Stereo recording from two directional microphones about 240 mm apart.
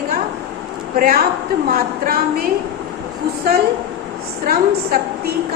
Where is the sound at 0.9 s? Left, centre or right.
Right.